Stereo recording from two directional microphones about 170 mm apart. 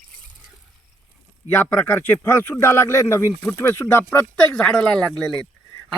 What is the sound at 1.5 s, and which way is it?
Speech, 10° left (ahead or behind).